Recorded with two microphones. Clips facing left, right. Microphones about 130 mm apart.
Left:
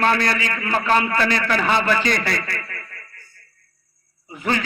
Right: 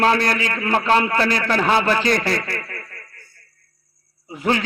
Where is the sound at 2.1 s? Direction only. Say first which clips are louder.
Right 3 dB; 40° right (ahead or behind).